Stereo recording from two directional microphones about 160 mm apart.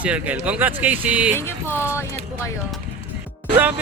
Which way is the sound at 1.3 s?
15° left (ahead or behind).